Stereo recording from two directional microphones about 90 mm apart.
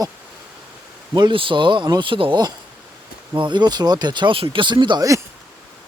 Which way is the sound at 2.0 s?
75° right (ahead or behind).